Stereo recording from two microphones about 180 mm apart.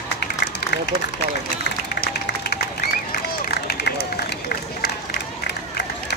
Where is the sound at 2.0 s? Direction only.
60° left (ahead or behind).